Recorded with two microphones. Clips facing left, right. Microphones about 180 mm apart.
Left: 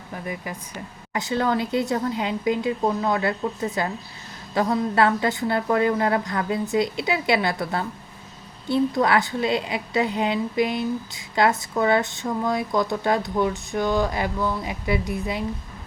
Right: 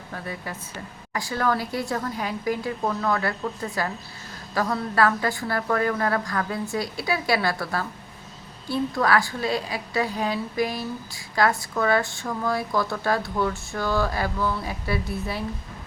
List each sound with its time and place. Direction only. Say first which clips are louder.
0.1 s a woman's voice: left 2 dB; 15° left (ahead or behind)